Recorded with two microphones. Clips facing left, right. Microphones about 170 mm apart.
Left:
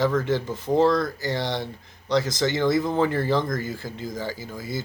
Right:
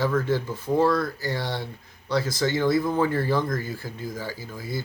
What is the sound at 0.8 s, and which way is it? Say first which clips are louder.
Speech: left 2 dB; 20° left (ahead or behind).